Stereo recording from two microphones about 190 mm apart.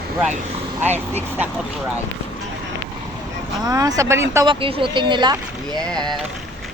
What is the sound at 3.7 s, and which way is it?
Speech, 20° right (ahead or behind).